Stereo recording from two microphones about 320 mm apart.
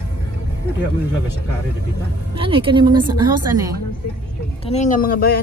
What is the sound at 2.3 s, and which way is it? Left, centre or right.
A woman's voice, centre.